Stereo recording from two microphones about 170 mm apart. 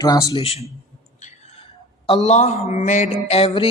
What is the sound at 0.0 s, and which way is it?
Speech, 20° left (ahead or behind).